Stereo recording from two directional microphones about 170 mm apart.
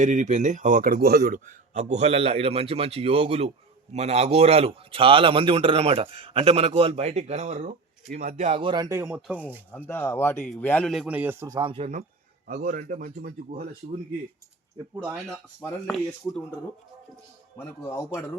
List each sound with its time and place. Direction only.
0.0 s a man's voice: 45° right (ahead or behind); by 9.6 s 10° right (ahead or behind)
9.7 s a man's voice: 10° left (ahead or behind); by 11.9 s 30° right (ahead or behind)
12.5 s speech: 55° right (ahead or behind)
17.6 s speech: 15° left (ahead or behind)